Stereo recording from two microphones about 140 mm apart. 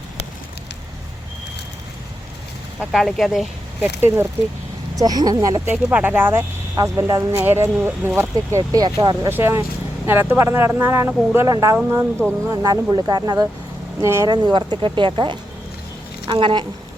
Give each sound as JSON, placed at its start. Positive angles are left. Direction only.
{"t": 2.9, "sound": "speech", "side_deg": 0}
{"t": 3.8, "sound": "speech", "side_deg": -20}
{"t": 5.7, "sound": "speech", "side_deg": -10}
{"t": 6.7, "sound": "speech", "side_deg": -25}
{"t": 9.3, "sound": "speech", "side_deg": -15}
{"t": 16.2, "sound": "a sound", "side_deg": -35}